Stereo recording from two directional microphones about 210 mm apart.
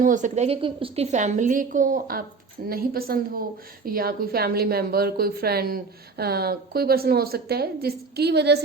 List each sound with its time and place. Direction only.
0.0 s a woman's voice: 35° right (ahead or behind)